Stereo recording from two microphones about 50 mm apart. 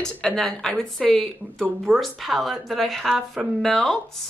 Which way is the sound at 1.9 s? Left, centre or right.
Centre.